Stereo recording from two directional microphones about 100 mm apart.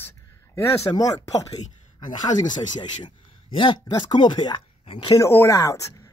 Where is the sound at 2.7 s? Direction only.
55° left (ahead or behind).